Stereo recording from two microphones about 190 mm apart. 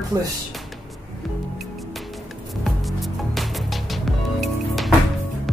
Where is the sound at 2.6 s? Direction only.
Centre (ahead or behind).